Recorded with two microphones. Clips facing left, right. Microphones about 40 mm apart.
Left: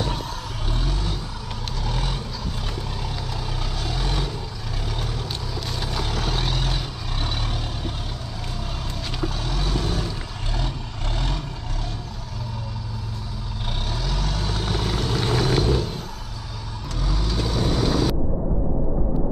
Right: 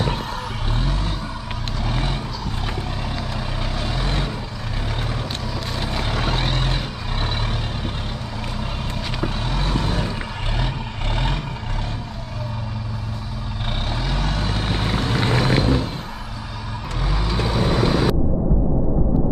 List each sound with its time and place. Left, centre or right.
1.9 s vehicle: right
3.8 s vehicle: right
5.8 s vehicle: right
9.2 s vehicle: right
11.1 s vehicle: right
14.0 s vehicle: right
17.0 s vehicle: right